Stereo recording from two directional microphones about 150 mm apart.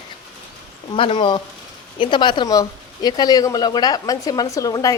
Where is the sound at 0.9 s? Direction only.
35° left (ahead or behind).